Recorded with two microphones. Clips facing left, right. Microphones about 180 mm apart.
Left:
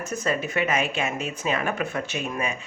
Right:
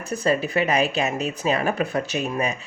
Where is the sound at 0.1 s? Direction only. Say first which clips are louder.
Right 5 dB; 35° right (ahead or behind).